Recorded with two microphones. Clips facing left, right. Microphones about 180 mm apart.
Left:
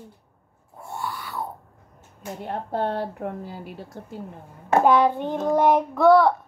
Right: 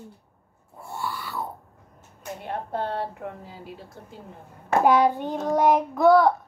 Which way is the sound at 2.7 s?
60° left (ahead or behind).